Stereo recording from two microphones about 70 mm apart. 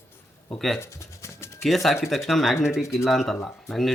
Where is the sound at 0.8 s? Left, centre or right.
Left.